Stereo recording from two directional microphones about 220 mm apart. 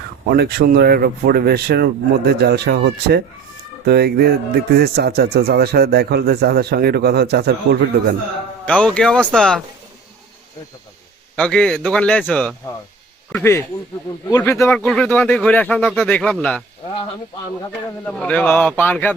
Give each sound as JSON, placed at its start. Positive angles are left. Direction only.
{"t": 0.3, "sound": "speech", "side_deg": -45}
{"t": 8.6, "sound": "speech", "side_deg": 5}
{"t": 11.3, "sound": "a man's voice", "side_deg": 5}
{"t": 18.0, "sound": "a man's voice", "side_deg": 5}